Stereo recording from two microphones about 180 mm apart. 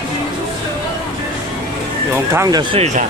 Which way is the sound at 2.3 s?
15° right (ahead or behind).